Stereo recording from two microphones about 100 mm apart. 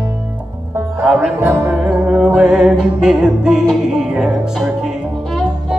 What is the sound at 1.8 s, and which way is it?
Music, 10° right (ahead or behind).